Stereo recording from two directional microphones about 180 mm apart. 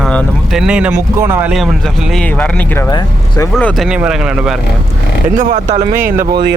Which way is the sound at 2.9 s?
20° left (ahead or behind).